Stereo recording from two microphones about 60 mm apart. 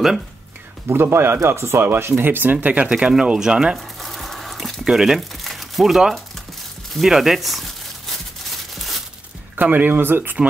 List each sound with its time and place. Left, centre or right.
0.8 s speech: right; by 3.8 s centre
4.0 s a sound: centre
4.8 s speech: centre
6.9 s crumpling: centre
9.6 s speech: right